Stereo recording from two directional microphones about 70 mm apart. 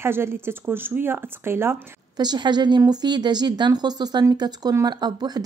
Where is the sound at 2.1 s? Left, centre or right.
Right.